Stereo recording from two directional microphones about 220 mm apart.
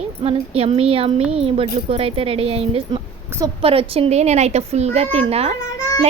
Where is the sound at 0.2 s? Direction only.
25° right (ahead or behind).